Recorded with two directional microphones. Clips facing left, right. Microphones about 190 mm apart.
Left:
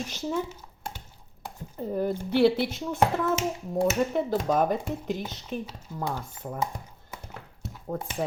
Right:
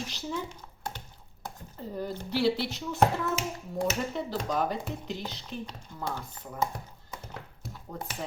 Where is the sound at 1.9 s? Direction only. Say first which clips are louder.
Left 6 dB; 55° left (ahead or behind).